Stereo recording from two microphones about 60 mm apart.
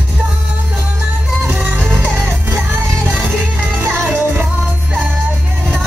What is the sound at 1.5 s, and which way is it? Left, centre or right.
Music, right.